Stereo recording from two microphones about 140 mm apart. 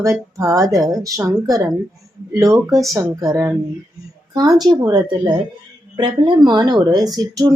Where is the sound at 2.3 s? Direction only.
20° right (ahead or behind).